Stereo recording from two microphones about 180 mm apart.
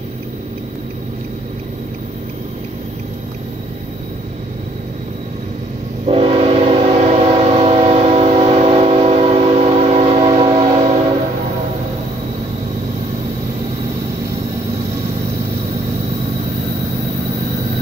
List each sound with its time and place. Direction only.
6.0 s train: 30° right (ahead or behind)